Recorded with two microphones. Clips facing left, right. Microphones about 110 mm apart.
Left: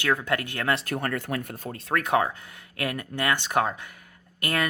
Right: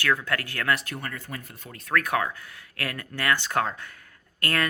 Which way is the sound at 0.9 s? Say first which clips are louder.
Left 7 dB; 50° left (ahead or behind).